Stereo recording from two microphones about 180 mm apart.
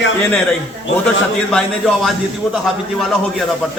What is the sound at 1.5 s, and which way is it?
A man's voice, centre (ahead or behind).